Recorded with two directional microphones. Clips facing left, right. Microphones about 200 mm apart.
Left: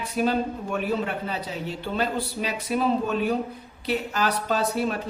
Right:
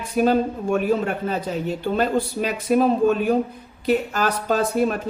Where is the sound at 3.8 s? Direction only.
45° right (ahead or behind).